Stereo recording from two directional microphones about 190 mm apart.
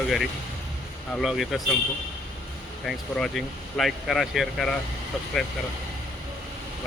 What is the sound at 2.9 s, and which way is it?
Speech, centre (ahead or behind).